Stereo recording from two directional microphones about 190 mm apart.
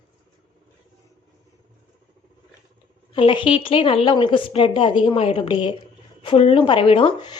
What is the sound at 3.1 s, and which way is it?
Speech, 25° left (ahead or behind).